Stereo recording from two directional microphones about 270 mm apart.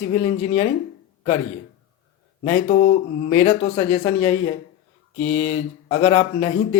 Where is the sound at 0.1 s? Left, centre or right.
Left.